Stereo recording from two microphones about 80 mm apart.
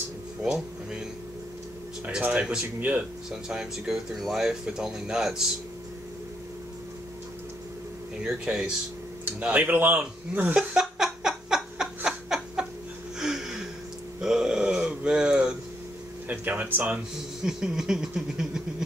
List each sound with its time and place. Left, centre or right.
0.4 s speech: centre
2.0 s speech: centre
8.2 s speech: centre
9.5 s chuckle: right
13.2 s a sound: centre
16.3 s speech: centre
17.4 s speech: centre